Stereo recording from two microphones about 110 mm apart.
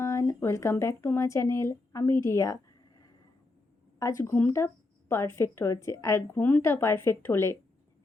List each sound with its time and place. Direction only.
0.0 s speech: 25° left (ahead or behind)
4.0 s speech: 30° left (ahead or behind)